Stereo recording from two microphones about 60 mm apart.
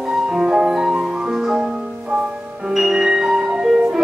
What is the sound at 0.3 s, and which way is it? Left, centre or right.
Music, centre.